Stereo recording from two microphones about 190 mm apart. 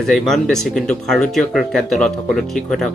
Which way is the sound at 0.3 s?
Centre (ahead or behind).